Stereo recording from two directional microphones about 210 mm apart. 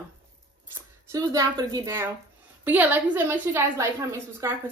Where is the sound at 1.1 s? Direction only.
15° right (ahead or behind).